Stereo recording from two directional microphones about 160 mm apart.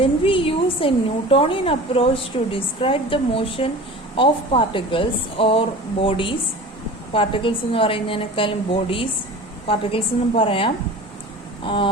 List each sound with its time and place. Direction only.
0.0 s a woman's voice: 35° left (ahead or behind)